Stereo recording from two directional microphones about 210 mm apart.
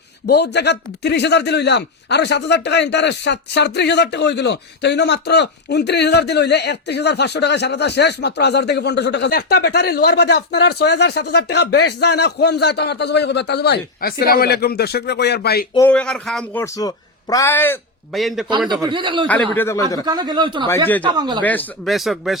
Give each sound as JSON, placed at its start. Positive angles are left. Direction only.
{"t": 0.3, "sound": "speech", "side_deg": 50}
{"t": 15.9, "sound": "speech", "side_deg": 5}
{"t": 16.7, "sound": "a man's voice", "side_deg": 15}
{"t": 18.9, "sound": "speech", "side_deg": -20}
{"t": 19.3, "sound": "speech", "side_deg": 10}
{"t": 20.1, "sound": "speech", "side_deg": -20}
{"t": 20.7, "sound": "speech", "side_deg": 10}
{"t": 21.1, "sound": "speech", "side_deg": -20}
{"t": 21.4, "sound": "speech", "side_deg": 10}